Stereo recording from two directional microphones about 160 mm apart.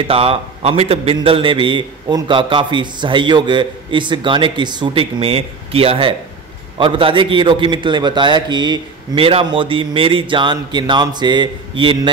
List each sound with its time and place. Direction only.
0.0 s a man's voice: 35° right (ahead or behind)